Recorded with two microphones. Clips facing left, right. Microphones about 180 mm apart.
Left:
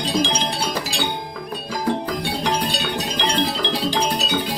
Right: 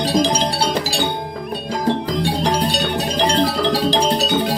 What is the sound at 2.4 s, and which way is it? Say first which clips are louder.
Music: right 4 dB; 35° right (ahead or behind).